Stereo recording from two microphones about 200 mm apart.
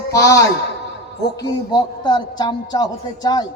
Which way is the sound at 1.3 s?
20° left (ahead or behind).